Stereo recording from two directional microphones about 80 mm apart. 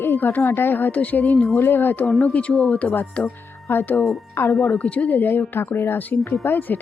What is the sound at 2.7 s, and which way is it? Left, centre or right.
A woman's voice, centre.